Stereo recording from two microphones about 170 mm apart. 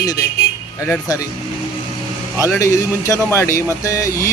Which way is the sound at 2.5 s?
20° left (ahead or behind).